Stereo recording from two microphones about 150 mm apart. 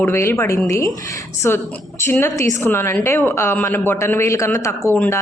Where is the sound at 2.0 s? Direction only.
15° left (ahead or behind).